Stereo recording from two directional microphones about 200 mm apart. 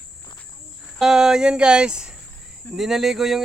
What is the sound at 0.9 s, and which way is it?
Speech, 5° right (ahead or behind).